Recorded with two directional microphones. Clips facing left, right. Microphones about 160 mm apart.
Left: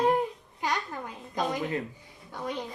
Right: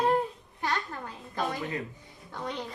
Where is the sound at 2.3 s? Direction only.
10° left (ahead or behind).